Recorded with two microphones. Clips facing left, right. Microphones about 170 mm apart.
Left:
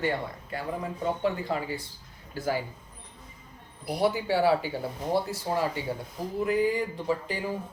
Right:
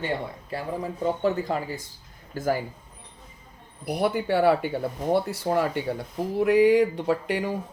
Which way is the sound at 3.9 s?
55° right (ahead or behind).